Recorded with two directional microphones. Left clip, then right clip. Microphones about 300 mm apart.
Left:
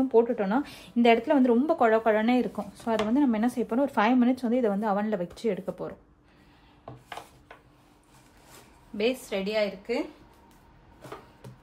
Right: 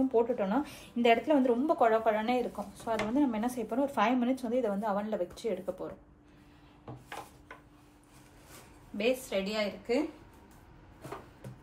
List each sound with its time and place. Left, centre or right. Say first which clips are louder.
0.4 s a woman's voice: left 4 dB; left
7.1 s a sound: left 2 dB; centre
8.9 s a woman's voice: left 2 dB; left